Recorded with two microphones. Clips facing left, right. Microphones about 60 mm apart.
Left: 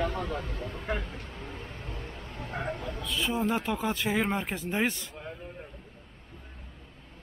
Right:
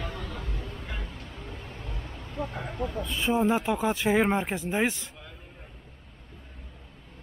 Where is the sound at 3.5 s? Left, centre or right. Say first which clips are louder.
Right 4 dB; centre.